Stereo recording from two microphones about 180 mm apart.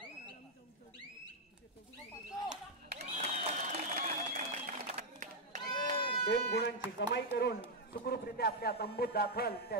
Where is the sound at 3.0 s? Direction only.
40° right (ahead or behind).